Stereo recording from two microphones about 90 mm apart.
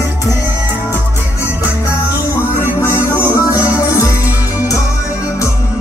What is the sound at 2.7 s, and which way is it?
Music, 30° left (ahead or behind).